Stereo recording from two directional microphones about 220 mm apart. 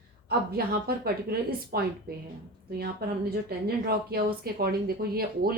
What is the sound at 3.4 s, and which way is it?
Speech, 45° right (ahead or behind).